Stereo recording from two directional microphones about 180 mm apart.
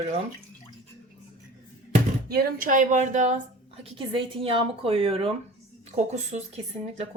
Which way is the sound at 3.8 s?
30° right (ahead or behind).